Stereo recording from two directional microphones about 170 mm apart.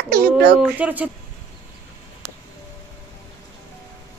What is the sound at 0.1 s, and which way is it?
Speech, 70° right (ahead or behind).